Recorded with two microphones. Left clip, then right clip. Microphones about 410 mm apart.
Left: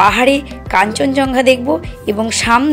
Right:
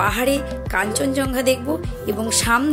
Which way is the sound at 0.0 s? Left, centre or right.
Right.